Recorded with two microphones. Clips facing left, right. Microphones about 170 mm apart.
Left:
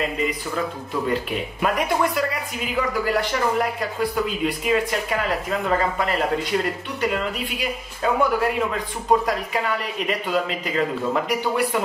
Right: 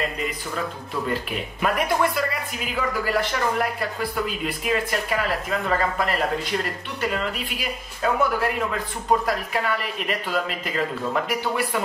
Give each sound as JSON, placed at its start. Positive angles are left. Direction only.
{"t": 0.0, "sound": "speech", "side_deg": 5}